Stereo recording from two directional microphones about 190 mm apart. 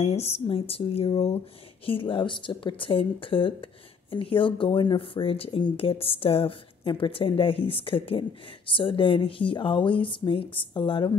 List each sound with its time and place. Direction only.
0.0 s speech: 35° left (ahead or behind)